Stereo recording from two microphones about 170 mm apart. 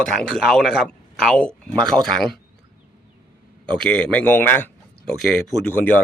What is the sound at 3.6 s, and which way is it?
Speech, 5° left (ahead or behind).